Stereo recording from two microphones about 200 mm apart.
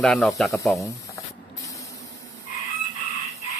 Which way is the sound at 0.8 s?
15° left (ahead or behind).